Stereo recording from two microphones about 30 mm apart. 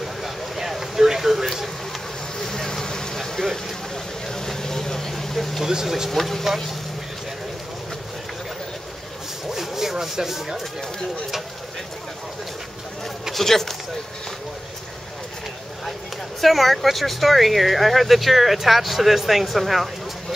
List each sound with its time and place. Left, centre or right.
0.0 s a sound: centre
2.3 s vehicle: centre
5.6 s speech: centre
6.0 s speech: centre
9.5 s rub: centre
13.3 s speech: centre
16.3 s speech: centre